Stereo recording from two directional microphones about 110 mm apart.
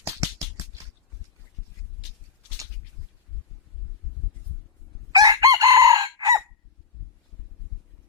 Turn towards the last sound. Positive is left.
turn(degrees=-35)  # may be behind; listen again after turning